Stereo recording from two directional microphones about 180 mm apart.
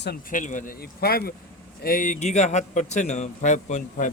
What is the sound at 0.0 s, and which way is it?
A man's voice, 55° left (ahead or behind).